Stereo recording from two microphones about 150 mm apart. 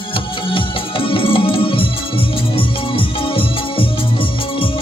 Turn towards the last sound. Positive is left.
turn(degrees=35)  # may be behind; listen again after turning